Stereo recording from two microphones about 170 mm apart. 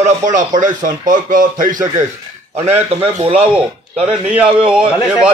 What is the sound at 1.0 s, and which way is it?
Speech, 50° right (ahead or behind).